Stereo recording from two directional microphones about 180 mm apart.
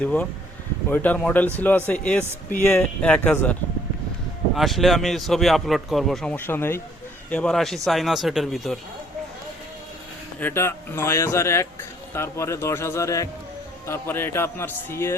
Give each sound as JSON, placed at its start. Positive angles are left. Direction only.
{"t": 0.0, "sound": "speech", "side_deg": 5}
{"t": 4.5, "sound": "a man's voice", "side_deg": 0}
{"t": 10.4, "sound": "speech", "side_deg": 15}